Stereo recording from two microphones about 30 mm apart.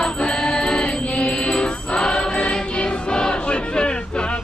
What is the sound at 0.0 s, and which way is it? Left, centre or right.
Music, left.